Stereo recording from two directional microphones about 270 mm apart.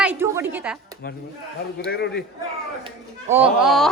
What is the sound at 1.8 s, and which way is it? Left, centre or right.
Speech, left.